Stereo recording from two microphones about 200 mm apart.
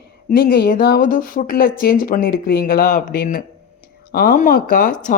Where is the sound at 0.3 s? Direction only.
45° left (ahead or behind).